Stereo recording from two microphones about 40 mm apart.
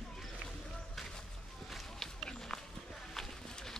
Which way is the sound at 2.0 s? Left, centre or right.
Centre.